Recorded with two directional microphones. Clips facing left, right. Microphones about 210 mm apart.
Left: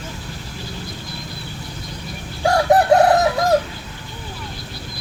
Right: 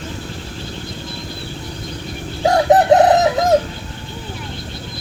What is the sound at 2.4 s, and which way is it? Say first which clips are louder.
Chicken: right 2 dB; 20° right (ahead or behind).